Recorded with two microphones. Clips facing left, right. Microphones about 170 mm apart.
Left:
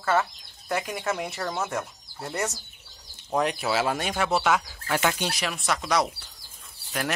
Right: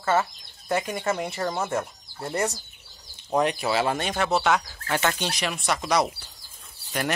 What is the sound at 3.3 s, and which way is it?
Speech, centre (ahead or behind).